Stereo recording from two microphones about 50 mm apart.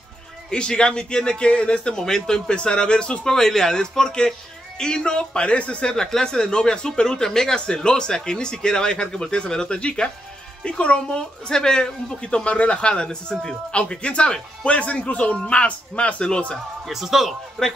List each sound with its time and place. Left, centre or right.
0.5 s speech: centre
16.8 s speech: centre
17.6 s speech: centre